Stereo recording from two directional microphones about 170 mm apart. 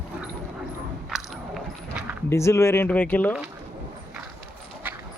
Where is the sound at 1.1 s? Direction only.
Centre (ahead or behind).